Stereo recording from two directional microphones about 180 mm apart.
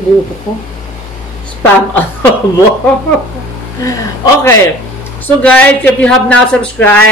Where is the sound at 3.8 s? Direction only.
15° left (ahead or behind).